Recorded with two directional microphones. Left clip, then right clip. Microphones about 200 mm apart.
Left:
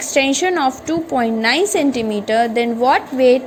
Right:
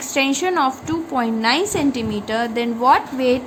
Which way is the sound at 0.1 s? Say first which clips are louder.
Left 3 dB; 15° left (ahead or behind).